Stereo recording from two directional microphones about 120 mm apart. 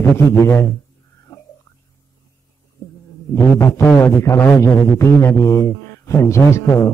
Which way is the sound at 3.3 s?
25° left (ahead or behind).